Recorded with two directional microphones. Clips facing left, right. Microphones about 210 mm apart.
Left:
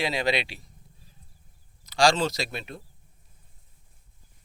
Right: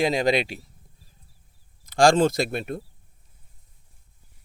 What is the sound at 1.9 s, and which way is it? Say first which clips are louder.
Speech: right 5 dB; 50° right (ahead or behind).